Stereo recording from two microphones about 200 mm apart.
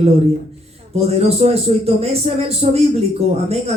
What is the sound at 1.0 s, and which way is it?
Speech, 30° right (ahead or behind).